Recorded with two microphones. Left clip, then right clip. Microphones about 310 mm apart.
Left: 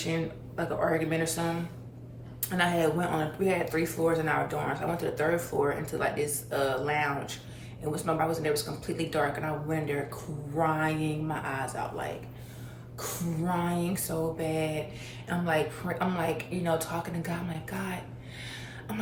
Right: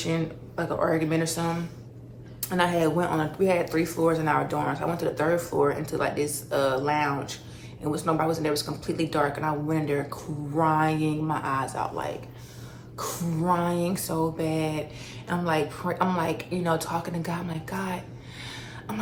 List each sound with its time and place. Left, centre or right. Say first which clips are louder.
0.0 s a woman's voice: right 3 dB; centre